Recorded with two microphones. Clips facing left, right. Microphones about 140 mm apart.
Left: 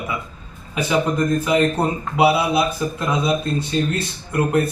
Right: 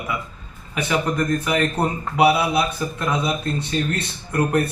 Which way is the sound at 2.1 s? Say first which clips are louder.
Left 1 dB; 20° left (ahead or behind).